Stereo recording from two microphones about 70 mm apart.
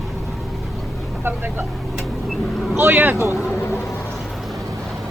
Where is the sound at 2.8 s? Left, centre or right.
Right.